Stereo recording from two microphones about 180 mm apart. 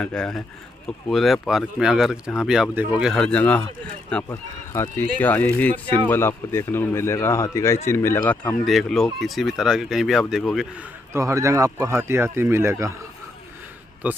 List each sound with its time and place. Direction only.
0.0 s speech: 5° left (ahead or behind)
8.6 s speech: centre (ahead or behind)
11.1 s speech: 15° right (ahead or behind)